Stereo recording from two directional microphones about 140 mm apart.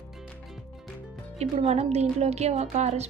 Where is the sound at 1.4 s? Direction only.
50° right (ahead or behind).